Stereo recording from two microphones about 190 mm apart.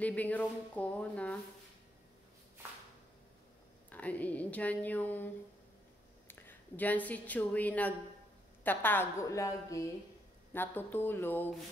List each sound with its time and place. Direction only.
0.0 s speech: 10° left (ahead or behind)
3.9 s a woman's voice: 10° left (ahead or behind)